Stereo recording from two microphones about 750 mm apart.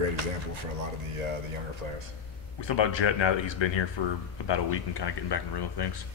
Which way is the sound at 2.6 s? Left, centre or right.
Left.